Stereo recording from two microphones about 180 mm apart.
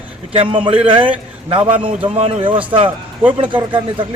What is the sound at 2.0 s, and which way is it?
A man's voice, 35° right (ahead or behind).